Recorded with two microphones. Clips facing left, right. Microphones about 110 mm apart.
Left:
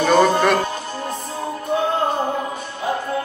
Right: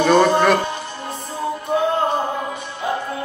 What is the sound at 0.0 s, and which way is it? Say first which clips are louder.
Music: right 1 dB; centre (ahead or behind).